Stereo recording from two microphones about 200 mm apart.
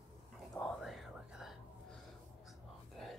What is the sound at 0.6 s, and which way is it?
Whispering, centre (ahead or behind).